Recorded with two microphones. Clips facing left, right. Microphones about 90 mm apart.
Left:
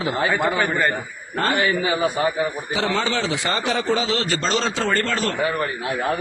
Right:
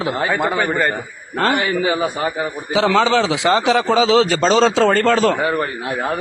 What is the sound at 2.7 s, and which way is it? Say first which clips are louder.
A man's voice: right 9 dB; 90° right.